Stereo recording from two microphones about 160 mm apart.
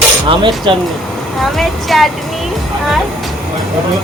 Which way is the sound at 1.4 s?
Centre (ahead or behind).